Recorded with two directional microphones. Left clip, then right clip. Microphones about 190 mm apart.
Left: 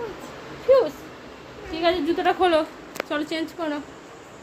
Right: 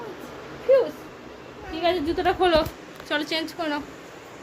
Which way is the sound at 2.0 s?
Centre (ahead or behind).